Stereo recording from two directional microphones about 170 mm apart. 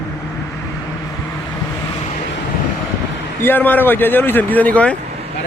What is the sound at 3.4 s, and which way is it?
Speech, 10° left (ahead or behind).